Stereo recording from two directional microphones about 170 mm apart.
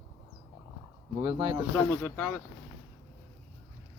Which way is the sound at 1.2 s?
25° right (ahead or behind).